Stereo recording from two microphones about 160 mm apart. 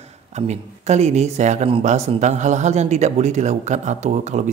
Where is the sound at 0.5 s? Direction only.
45° right (ahead or behind).